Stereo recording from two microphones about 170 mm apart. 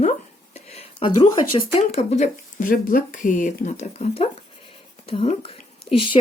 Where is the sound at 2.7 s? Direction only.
55° left (ahead or behind).